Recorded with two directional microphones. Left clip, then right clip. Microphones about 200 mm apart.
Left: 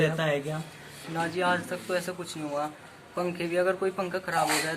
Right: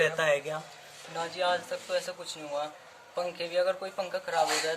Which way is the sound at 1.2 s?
20° right (ahead or behind).